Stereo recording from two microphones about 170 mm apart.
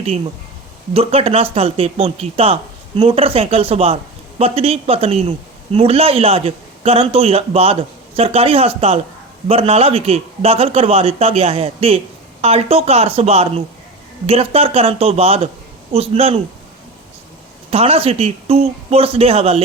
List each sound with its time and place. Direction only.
0.9 s a man's voice: 35° right (ahead or behind)
17.7 s a man's voice: 35° right (ahead or behind)